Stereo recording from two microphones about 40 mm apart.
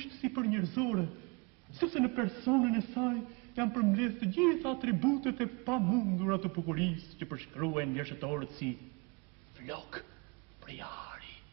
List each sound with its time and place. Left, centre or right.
0.0 s a man's voice: centre
10.6 s whispering: centre